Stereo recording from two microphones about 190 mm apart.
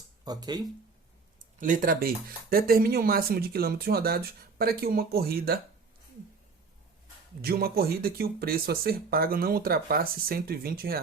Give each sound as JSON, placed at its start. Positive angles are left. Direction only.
{"t": 0.3, "sound": "speech", "side_deg": -20}
{"t": 1.5, "sound": "speech", "side_deg": -45}
{"t": 7.4, "sound": "speech", "side_deg": -55}